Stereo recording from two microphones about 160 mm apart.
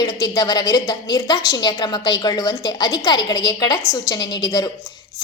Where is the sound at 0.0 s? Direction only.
25° left (ahead or behind).